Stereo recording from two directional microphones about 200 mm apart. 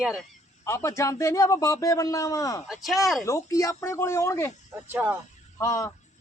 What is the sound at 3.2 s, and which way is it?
Speech, 15° left (ahead or behind).